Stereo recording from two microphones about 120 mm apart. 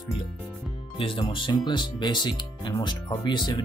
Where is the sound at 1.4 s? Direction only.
40° left (ahead or behind).